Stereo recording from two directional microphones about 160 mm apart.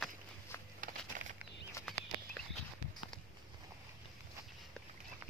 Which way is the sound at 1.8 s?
5° left (ahead or behind).